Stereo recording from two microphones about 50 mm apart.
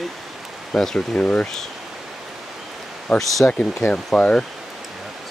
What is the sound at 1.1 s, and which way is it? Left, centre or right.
Speech, left.